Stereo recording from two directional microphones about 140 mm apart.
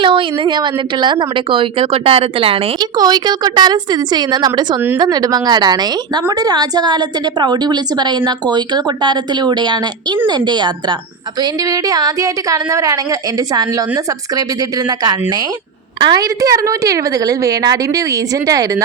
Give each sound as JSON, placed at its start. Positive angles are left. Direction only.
{"t": 0.0, "sound": "a woman's voice", "side_deg": -35}
{"t": 3.0, "sound": "a woman's voice", "side_deg": -30}
{"t": 16.0, "sound": "a woman's voice", "side_deg": -30}